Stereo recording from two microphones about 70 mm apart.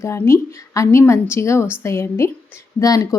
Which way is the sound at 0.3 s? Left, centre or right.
Left.